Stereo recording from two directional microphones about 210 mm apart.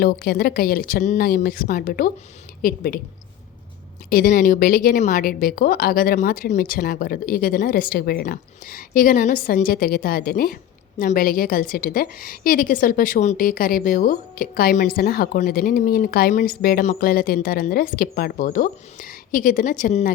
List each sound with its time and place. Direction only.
0.0 s a woman's voice: 45° left (ahead or behind)
4.1 s a woman's voice: 45° left (ahead or behind)